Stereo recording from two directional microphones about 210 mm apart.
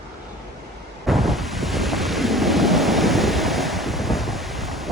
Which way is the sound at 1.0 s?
Centre (ahead or behind).